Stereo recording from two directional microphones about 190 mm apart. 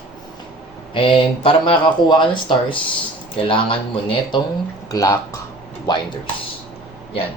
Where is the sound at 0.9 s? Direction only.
30° left (ahead or behind).